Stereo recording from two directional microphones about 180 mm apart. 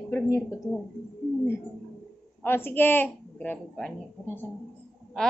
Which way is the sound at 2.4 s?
10° left (ahead or behind).